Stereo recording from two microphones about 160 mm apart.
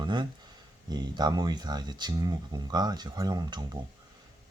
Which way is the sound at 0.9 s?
25° right (ahead or behind).